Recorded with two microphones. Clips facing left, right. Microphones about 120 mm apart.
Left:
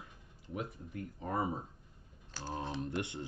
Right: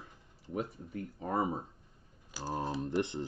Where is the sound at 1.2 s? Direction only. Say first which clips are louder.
Right 3 dB; 30° right (ahead or behind).